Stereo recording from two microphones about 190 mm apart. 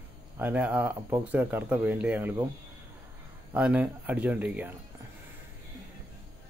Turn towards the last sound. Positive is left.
turn(degrees=-10)  # may be behind; listen again after turning